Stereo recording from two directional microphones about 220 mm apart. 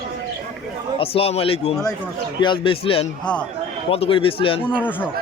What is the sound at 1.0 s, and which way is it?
A man's voice, 25° left (ahead or behind).